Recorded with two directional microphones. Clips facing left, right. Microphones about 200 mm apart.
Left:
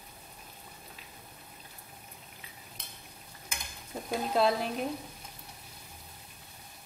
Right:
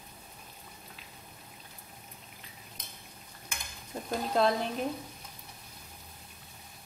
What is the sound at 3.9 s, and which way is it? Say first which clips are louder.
Speech: even; 5° left (ahead or behind).